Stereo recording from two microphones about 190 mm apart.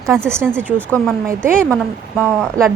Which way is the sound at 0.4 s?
5° left (ahead or behind).